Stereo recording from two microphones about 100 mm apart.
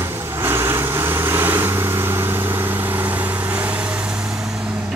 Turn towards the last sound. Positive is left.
turn(degrees=-15)  # may be behind; listen again after turning